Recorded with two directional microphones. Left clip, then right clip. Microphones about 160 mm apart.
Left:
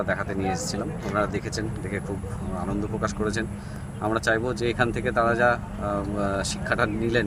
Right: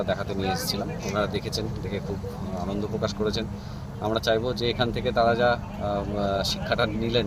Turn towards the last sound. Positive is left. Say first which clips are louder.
# left 1 dB
turn(degrees=15)  # may be behind; listen again after turning